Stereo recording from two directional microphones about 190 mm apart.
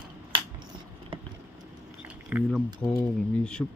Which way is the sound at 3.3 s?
5° left (ahead or behind).